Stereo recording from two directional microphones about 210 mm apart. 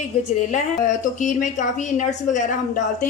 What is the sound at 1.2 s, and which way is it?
A woman's voice, 35° left (ahead or behind).